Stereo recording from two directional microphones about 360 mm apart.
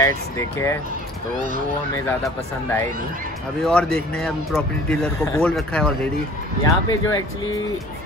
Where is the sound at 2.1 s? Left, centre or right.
Centre.